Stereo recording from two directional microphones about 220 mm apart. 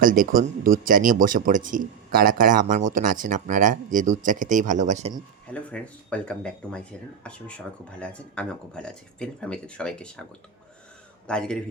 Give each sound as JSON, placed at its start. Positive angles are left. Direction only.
{"t": 0.0, "sound": "a man's voice", "side_deg": -40}
{"t": 5.5, "sound": "speech", "side_deg": 5}
{"t": 11.3, "sound": "speech", "side_deg": 5}